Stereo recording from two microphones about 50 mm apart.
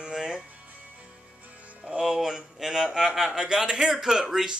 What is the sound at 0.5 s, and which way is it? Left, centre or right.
Music, right.